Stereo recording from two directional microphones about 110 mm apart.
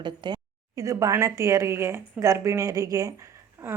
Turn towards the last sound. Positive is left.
turn(degrees=-25)  # may be behind; listen again after turning